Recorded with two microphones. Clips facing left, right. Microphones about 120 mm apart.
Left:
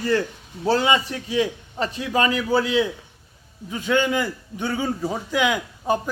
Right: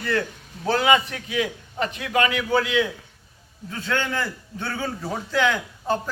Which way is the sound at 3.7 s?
15° left (ahead or behind).